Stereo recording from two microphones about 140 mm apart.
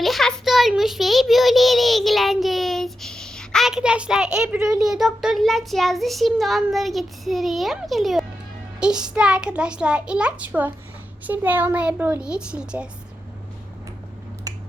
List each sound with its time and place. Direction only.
0.0 s a sound: centre (ahead or behind)
8.8 s a child's voice: 5° right (ahead or behind)
14.5 s finger snapping: 25° right (ahead or behind)